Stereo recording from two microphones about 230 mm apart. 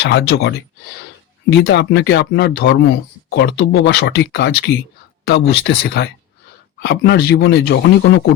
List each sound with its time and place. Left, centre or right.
0.0 s speech: left